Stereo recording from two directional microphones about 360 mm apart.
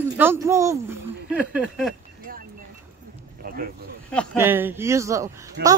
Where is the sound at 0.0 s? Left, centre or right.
Centre.